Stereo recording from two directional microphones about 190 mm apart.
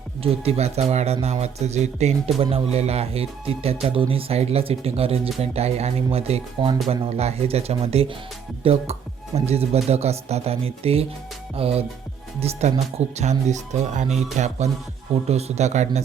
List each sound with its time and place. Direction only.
0.2 s speech: 30° right (ahead or behind)